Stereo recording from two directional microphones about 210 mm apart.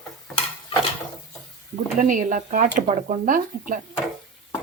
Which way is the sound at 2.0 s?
40° right (ahead or behind).